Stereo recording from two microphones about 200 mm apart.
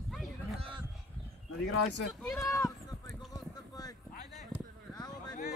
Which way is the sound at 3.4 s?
20° left (ahead or behind).